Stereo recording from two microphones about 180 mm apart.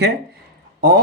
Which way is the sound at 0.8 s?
55° right (ahead or behind).